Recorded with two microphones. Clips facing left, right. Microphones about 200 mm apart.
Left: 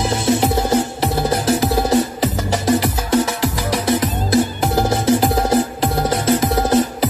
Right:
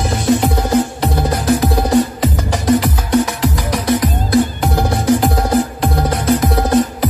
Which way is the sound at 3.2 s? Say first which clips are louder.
Right 2 dB; 25° left (ahead or behind).